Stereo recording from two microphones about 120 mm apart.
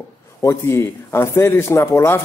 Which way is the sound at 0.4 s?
25° left (ahead or behind).